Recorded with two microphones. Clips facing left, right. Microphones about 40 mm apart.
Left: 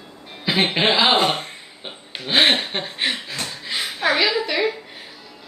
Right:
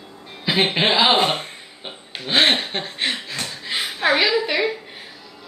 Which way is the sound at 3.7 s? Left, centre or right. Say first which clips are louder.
Right 1 dB; centre.